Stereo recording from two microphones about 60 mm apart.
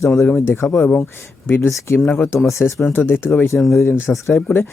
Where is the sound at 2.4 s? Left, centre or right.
Left.